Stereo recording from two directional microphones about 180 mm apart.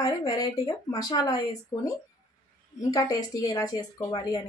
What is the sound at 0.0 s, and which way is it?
A woman's voice, 20° left (ahead or behind).